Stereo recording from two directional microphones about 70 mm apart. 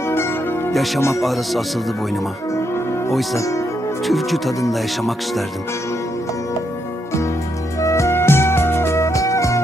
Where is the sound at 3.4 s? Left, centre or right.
Left.